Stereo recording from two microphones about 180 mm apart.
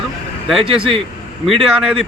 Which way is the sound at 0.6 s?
30° right (ahead or behind).